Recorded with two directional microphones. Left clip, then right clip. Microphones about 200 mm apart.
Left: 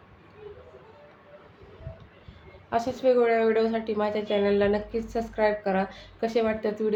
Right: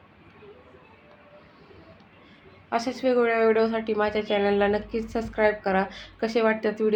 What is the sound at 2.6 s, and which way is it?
A woman's voice, 10° right (ahead or behind).